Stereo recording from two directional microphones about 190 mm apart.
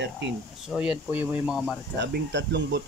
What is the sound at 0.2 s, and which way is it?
Speech, 70° right (ahead or behind).